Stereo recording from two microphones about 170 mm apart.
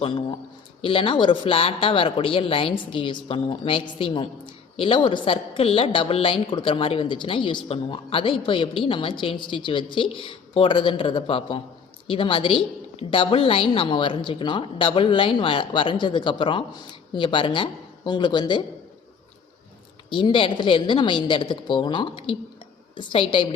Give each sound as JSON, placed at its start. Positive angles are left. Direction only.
{"t": 0.0, "sound": "a woman's voice", "side_deg": 30}
{"t": 20.1, "sound": "a woman's voice", "side_deg": 30}